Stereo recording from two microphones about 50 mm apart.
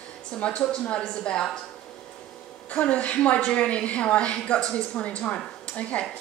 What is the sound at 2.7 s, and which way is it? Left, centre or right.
A woman's voice, left.